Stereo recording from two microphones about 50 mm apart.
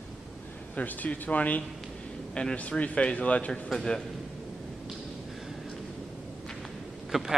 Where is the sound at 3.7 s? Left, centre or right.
Centre.